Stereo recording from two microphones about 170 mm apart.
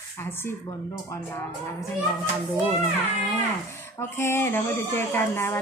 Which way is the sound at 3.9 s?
15° left (ahead or behind).